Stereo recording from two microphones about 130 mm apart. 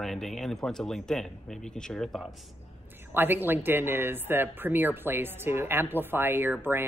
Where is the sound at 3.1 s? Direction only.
15° right (ahead or behind).